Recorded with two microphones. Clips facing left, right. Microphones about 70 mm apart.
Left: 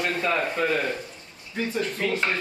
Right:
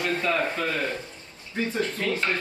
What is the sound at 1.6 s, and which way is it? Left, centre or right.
Speech, right.